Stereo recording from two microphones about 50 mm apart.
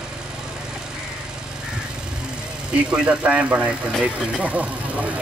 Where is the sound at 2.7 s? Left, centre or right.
Right.